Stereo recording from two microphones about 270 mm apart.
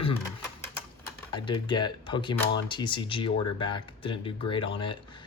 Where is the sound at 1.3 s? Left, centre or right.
Centre.